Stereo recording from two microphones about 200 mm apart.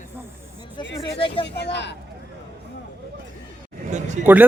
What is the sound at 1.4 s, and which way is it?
Speech, 60° left (ahead or behind).